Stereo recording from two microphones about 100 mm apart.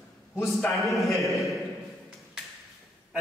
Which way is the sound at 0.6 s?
Centre (ahead or behind).